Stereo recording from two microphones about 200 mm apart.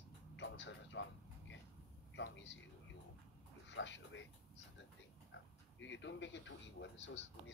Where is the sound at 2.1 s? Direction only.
65° left (ahead or behind).